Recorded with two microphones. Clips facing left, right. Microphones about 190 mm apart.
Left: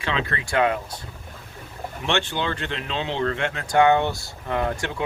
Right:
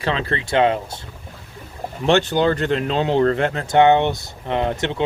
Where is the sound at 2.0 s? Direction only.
40° right (ahead or behind).